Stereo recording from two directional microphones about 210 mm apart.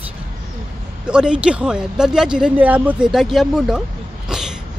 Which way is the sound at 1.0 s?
5° right (ahead or behind).